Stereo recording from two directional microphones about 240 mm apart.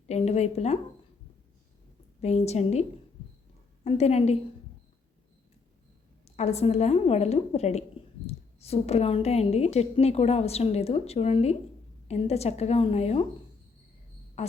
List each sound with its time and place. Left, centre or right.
0.1 s a woman's voice: left
2.2 s a woman's voice: left
3.8 s a woman's voice: left
6.2 s a woman's voice: left
14.4 s a sound: left